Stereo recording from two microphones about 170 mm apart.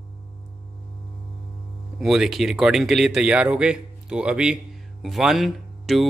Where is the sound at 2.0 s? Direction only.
Centre (ahead or behind).